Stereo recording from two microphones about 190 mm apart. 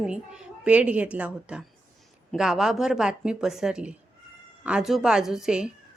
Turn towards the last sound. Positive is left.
turn(degrees=-5)  # may be behind; listen again after turning